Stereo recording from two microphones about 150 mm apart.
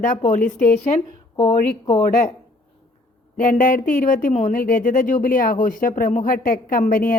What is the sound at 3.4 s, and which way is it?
Speech, 60° left (ahead or behind).